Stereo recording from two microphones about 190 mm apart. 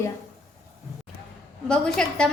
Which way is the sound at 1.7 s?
5° left (ahead or behind).